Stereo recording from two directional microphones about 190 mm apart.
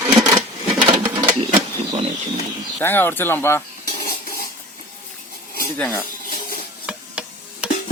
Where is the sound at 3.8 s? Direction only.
55° left (ahead or behind).